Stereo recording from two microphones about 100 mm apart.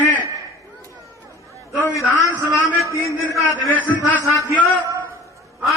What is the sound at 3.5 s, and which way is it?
Speech, 20° left (ahead or behind).